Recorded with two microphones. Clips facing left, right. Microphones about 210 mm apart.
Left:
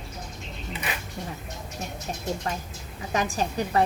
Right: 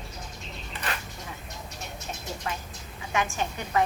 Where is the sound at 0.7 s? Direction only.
5° left (ahead or behind).